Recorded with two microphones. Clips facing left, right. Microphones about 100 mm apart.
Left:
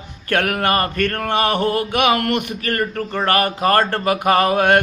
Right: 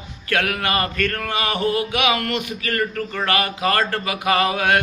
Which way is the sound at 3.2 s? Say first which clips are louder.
Left 4 dB; 45° left (ahead or behind).